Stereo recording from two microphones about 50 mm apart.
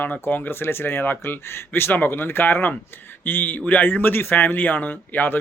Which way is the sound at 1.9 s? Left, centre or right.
Left.